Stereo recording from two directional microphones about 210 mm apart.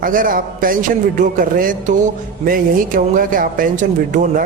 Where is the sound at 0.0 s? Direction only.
40° right (ahead or behind).